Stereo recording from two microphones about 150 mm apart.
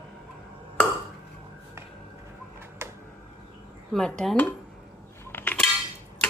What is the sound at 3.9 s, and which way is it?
Speech, 5° left (ahead or behind).